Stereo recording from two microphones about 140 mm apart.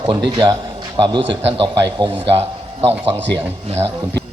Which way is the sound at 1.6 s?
35° right (ahead or behind).